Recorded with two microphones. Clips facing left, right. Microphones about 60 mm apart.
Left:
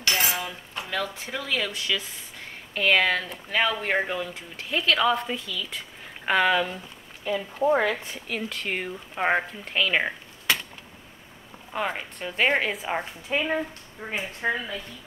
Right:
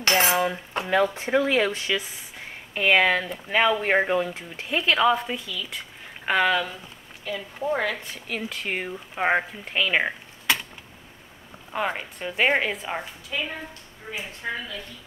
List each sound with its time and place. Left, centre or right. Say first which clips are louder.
0.0 s cutlery: right 6 dB; right
2.0 s speech: right 3 dB; centre
7.7 s speech: left 3 dB; centre
8.3 s speech: even; centre
11.7 s speech: right 2 dB; centre
13.3 s speech: left 6 dB; left